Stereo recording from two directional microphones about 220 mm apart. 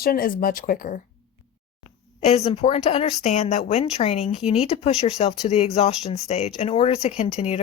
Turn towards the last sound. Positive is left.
turn(degrees=30)  # may be behind; listen again after turning